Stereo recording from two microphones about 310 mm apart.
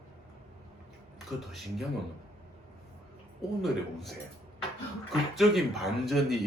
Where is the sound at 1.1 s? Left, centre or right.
Centre.